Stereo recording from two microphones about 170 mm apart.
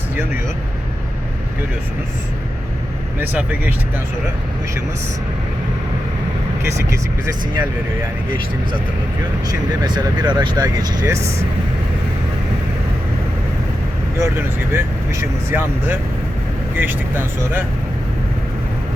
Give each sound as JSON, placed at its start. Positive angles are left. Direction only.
{"t": 3.2, "sound": "speech", "side_deg": -10}
{"t": 9.8, "sound": "speech", "side_deg": -25}
{"t": 14.2, "sound": "speech", "side_deg": -15}